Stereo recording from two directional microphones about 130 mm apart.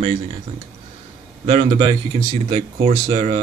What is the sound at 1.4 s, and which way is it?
Speech, 50° right (ahead or behind).